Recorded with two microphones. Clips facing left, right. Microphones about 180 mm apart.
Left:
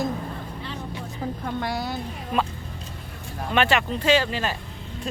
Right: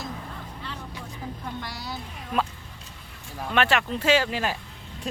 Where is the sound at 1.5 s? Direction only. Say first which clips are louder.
Left 9 dB; 55° left (ahead or behind).